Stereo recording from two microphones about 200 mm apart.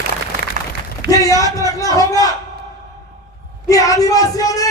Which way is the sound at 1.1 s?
15° left (ahead or behind).